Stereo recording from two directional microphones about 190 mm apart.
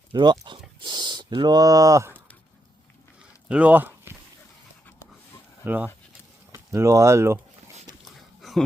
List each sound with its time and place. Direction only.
0.1 s speech: 25° right (ahead or behind)
3.5 s speech: 10° right (ahead or behind)
5.6 s speech: 10° right (ahead or behind)
8.0 s a sound: centre (ahead or behind)